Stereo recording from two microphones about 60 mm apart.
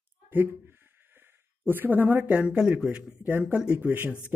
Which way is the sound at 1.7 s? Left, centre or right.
Right.